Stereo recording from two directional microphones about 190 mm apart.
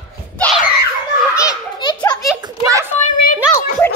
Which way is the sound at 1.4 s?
20° left (ahead or behind).